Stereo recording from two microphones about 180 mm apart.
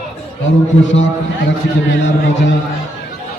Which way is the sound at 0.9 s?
90° left.